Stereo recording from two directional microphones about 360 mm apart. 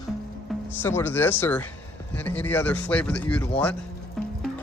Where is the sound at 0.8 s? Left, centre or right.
Centre.